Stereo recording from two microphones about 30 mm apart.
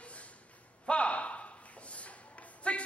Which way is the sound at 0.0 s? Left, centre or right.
Left.